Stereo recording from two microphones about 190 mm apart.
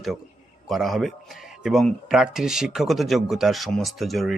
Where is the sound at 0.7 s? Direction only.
Centre (ahead or behind).